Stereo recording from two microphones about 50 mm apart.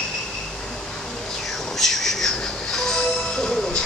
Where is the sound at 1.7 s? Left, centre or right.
Centre.